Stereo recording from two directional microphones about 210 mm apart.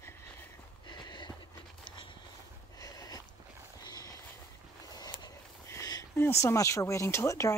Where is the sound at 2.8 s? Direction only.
15° left (ahead or behind).